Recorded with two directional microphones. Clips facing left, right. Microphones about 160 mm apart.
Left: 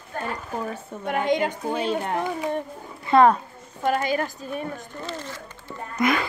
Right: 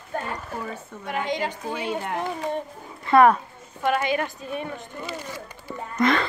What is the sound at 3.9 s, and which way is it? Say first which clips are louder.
Speech: even; 40° left (ahead or behind).